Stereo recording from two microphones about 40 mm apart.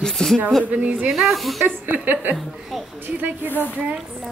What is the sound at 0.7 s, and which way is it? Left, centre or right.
Speech, right.